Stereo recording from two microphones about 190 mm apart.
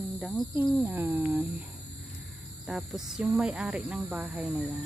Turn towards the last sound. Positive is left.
turn(degrees=0)  # may be behind; listen again after turning